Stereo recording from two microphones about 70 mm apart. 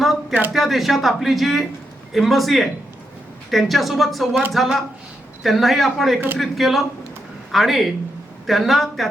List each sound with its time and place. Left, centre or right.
0.0 s a sound: centre
0.5 s speech: centre
6.1 s a man's voice: right
6.4 s speech: centre